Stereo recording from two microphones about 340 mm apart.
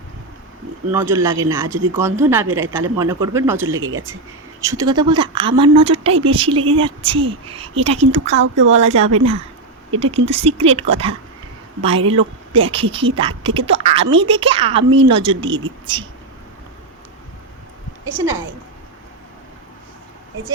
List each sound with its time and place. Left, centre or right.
0.9 s speech: centre
3.7 s speech: right
4.6 s speech: centre
8.3 s speech: right
8.8 s speech: centre